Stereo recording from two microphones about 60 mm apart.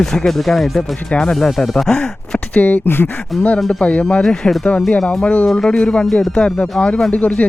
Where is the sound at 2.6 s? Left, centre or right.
Left.